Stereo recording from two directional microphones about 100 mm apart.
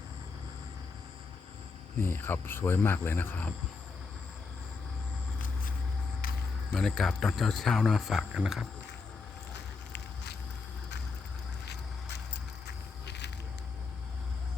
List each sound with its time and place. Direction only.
2.0 s speech: 20° left (ahead or behind)
6.7 s speech: 5° left (ahead or behind)